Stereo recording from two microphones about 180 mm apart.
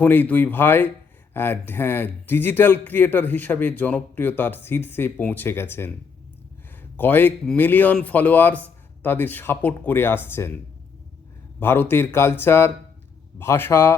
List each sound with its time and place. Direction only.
0.0 s speech: 10° left (ahead or behind)
6.9 s speech: 10° left (ahead or behind)
11.6 s speech: 10° left (ahead or behind)